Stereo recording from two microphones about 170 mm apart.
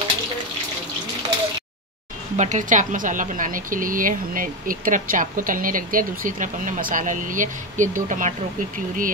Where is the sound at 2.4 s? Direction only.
45° right (ahead or behind).